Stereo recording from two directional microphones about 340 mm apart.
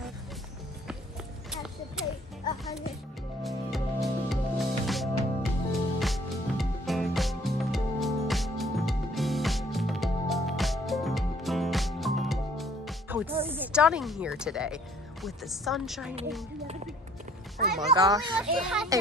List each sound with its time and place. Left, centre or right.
1.5 s clip-clop: centre
3.4 s music: centre
13.5 s a woman's voice: centre
15.2 s chopping: centre
17.6 s music: right
17.9 s a child's voice: centre
18.7 s chopping: centre